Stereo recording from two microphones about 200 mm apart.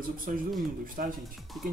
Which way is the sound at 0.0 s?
45° right (ahead or behind).